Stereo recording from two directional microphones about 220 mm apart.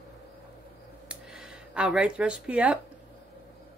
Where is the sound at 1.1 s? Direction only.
5° right (ahead or behind).